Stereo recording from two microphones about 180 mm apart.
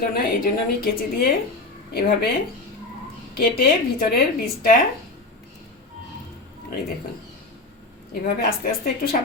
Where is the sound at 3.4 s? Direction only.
55° left (ahead or behind).